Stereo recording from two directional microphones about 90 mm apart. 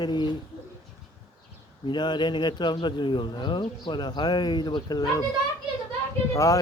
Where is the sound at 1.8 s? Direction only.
55° left (ahead or behind).